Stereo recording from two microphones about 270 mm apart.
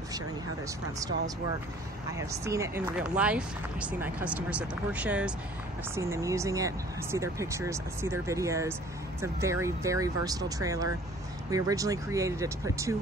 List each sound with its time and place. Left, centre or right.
0.9 s speech: centre